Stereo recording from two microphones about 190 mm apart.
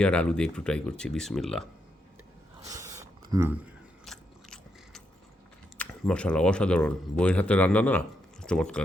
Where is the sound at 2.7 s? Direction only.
15° right (ahead or behind).